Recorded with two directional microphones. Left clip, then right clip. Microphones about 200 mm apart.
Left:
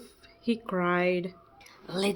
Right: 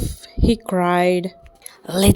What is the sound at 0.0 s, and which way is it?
Speech, 35° right (ahead or behind).